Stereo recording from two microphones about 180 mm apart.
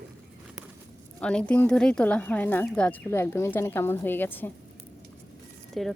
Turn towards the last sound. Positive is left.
turn(degrees=0)  # may be behind; listen again after turning